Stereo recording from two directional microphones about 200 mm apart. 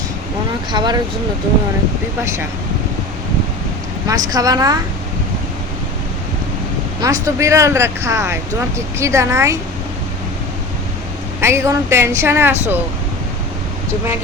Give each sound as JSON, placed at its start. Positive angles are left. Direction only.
{"t": 0.7, "sound": "speech", "side_deg": -20}
{"t": 2.2, "sound": "speech", "side_deg": -15}
{"t": 4.0, "sound": "speech", "side_deg": -15}
{"t": 7.0, "sound": "speech", "side_deg": -15}
{"t": 11.3, "sound": "speech", "side_deg": -15}